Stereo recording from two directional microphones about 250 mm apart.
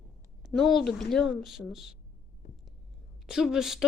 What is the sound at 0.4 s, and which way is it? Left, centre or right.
Speech, centre.